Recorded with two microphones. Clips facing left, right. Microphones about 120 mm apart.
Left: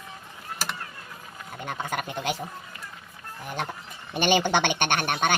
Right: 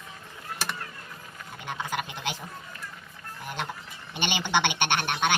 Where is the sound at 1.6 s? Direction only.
45° left (ahead or behind).